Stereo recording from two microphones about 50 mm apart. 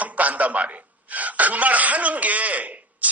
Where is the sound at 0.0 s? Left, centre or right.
Right.